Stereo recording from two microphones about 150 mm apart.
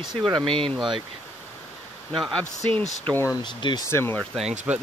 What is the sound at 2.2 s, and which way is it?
Speech, centre (ahead or behind).